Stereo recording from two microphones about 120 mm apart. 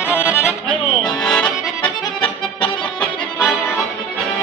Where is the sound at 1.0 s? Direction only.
5° left (ahead or behind).